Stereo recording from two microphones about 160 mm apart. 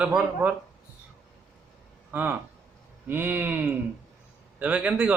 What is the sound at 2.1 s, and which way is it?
Speech, 10° right (ahead or behind).